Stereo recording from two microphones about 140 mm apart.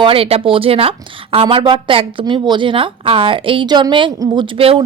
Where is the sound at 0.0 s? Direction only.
40° right (ahead or behind).